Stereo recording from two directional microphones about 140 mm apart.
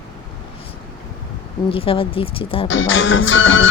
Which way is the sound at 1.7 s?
40° left (ahead or behind).